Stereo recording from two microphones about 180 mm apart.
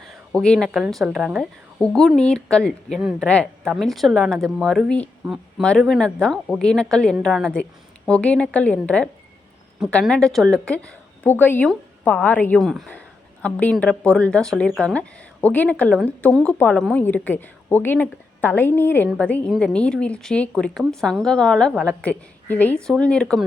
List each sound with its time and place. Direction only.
0.1 s a woman's voice: 5° left (ahead or behind)